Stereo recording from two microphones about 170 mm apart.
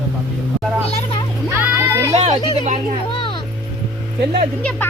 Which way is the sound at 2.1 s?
40° right (ahead or behind).